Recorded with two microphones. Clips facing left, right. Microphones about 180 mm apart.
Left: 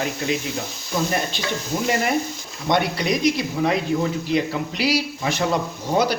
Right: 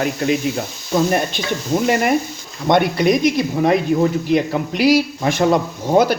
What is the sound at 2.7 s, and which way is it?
Speech, 50° right (ahead or behind).